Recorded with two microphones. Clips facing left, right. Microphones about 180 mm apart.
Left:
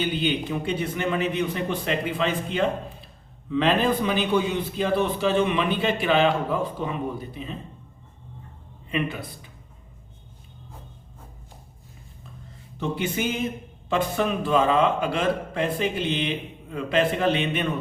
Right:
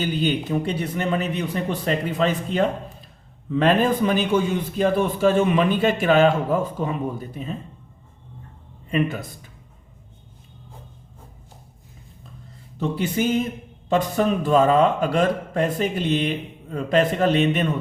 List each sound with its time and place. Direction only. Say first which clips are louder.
0.0 s a man's voice: right 2 dB; 40° right (ahead or behind)
8.9 s a man's voice: right 5 dB; 45° right (ahead or behind)
13.0 s a man's voice: right 5 dB; 35° right (ahead or behind)